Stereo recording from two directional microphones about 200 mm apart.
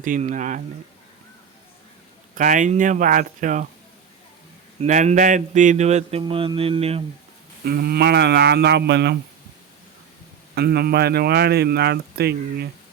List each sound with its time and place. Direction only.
0.0 s speech: 40° right (ahead or behind)
2.3 s speech: 40° right (ahead or behind)
4.8 s speech: 35° right (ahead or behind)
7.6 s speech: 50° right (ahead or behind)
10.5 s speech: 50° right (ahead or behind)